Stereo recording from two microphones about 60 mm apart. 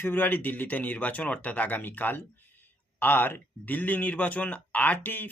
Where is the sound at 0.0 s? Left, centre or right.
Left.